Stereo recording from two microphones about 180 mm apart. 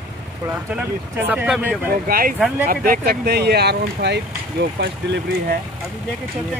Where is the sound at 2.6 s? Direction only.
55° right (ahead or behind).